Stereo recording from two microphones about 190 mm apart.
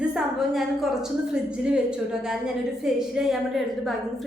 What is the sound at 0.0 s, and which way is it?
A woman's voice, 5° right (ahead or behind).